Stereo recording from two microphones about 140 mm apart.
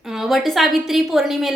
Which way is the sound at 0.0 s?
5° right (ahead or behind).